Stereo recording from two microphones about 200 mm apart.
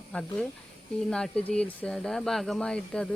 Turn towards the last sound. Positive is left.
turn(degrees=5)  # may be behind; listen again after turning